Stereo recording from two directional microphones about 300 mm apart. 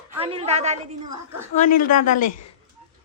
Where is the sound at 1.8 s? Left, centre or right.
Left.